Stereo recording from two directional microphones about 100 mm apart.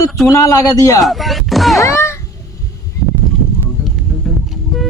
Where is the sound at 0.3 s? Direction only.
35° left (ahead or behind).